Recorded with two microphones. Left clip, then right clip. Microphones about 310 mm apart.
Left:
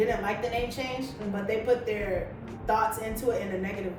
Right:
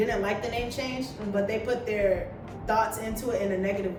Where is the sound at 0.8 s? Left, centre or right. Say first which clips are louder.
Right 1 dB; centre.